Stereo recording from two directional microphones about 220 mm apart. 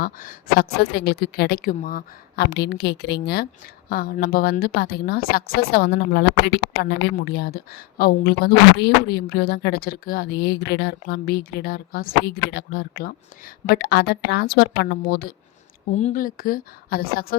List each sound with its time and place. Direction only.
0.0 s a woman's voice: 40° left (ahead or behind)